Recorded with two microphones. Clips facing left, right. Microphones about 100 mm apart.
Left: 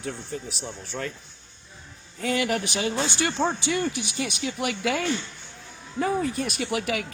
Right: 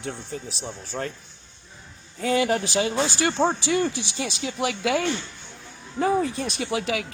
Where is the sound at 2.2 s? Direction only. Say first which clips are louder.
Right 3 dB; 30° right (ahead or behind).